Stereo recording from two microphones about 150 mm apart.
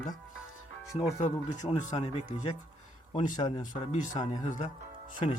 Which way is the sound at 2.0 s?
50° left (ahead or behind).